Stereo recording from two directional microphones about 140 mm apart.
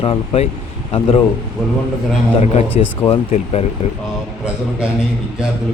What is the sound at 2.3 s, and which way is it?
Speech, 50° left (ahead or behind).